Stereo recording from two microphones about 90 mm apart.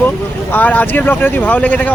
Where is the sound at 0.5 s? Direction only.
20° left (ahead or behind).